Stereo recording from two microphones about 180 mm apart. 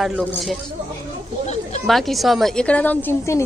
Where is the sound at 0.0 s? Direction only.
Centre (ahead or behind).